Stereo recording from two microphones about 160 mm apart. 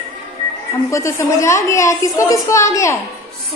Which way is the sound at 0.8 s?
20° left (ahead or behind).